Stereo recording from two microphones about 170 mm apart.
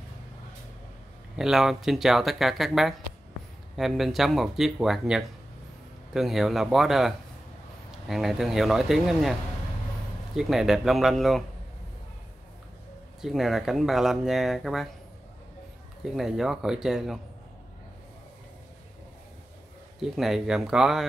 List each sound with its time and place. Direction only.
1.3 s speech: 5° right (ahead or behind)
10.3 s speech: centre (ahead or behind)
13.2 s speech: centre (ahead or behind)
16.2 s speech: centre (ahead or behind)
20.0 s speech: centre (ahead or behind)